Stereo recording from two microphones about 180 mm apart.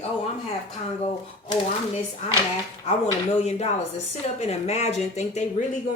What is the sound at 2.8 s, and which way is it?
Speech, 40° left (ahead or behind).